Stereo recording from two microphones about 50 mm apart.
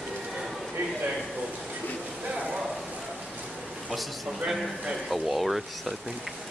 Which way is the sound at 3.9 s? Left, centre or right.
Centre.